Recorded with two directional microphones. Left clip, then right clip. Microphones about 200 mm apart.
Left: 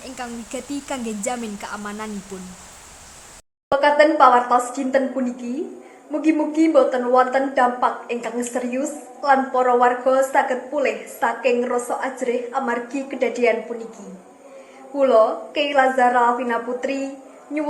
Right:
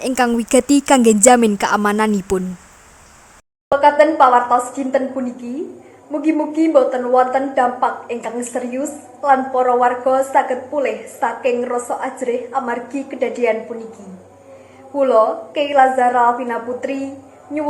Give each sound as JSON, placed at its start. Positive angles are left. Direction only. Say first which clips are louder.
{"t": 0.0, "sound": "speech", "louder": "right 15 dB", "side_deg": -50}
{"t": 3.7, "sound": "a woman's voice", "louder": "right 3 dB", "side_deg": 0}
{"t": 14.9, "sound": "a woman's voice", "louder": "right 2 dB", "side_deg": 0}